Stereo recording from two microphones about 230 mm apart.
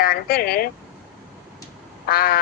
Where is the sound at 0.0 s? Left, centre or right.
Left.